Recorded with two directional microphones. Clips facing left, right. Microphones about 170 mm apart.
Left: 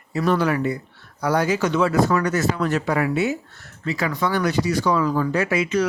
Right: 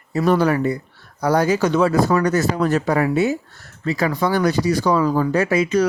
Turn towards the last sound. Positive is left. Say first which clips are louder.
# right 3 dB
turn(degrees=-40)  # may be behind; listen again after turning